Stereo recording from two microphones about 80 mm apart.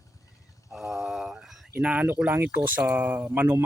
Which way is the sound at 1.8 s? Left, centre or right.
Right.